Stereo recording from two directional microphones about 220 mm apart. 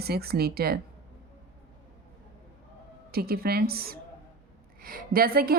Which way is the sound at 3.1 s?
45° right (ahead or behind).